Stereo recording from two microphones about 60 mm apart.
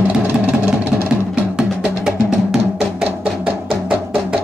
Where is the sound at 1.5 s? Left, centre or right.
Centre.